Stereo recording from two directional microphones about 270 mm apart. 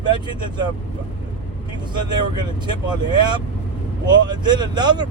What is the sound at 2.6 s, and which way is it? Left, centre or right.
Speech, centre.